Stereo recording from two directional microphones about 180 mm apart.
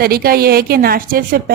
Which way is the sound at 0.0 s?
55° right (ahead or behind).